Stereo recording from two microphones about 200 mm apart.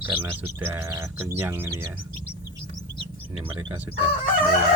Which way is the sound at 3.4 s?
10° right (ahead or behind).